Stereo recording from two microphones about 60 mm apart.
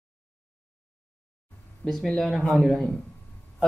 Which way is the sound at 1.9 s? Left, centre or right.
Centre.